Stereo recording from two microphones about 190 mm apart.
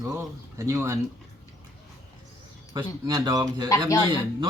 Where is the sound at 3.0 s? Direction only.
20° right (ahead or behind).